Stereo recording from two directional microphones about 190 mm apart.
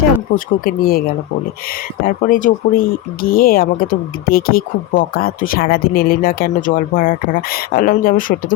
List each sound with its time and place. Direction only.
0.3 s speech: 50° left (ahead or behind)
2.0 s speech: 45° left (ahead or behind)